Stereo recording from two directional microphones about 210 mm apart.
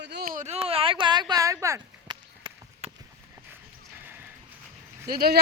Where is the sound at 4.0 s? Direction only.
10° right (ahead or behind).